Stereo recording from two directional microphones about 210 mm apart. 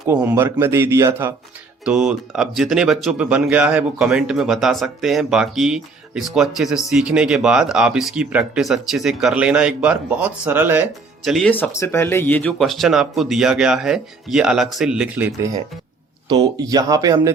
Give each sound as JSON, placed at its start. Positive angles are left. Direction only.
{"t": 0.1, "sound": "speech", "side_deg": -10}
{"t": 11.3, "sound": "speech", "side_deg": 0}
{"t": 16.3, "sound": "speech", "side_deg": -20}